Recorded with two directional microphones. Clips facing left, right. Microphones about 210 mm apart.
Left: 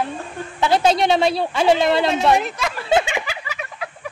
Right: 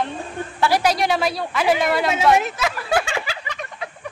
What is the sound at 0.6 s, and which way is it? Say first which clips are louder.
Speech: left 2 dB; 25° left (ahead or behind).